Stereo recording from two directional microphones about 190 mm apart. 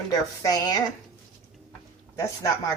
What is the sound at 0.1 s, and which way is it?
Speech, 20° left (ahead or behind).